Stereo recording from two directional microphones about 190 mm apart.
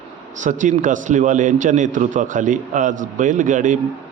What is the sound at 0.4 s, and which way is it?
A man's voice, 40° right (ahead or behind).